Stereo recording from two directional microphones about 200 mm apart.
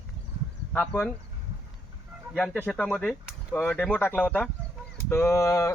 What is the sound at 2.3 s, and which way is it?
Speech, 5° left (ahead or behind).